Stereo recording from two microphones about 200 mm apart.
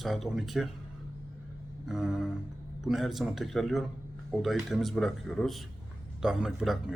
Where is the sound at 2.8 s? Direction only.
Centre (ahead or behind).